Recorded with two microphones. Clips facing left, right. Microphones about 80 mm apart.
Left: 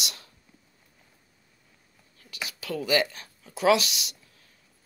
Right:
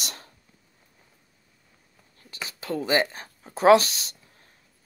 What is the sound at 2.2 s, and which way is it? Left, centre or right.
Speech, right.